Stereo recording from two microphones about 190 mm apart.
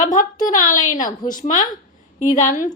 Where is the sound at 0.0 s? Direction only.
45° left (ahead or behind).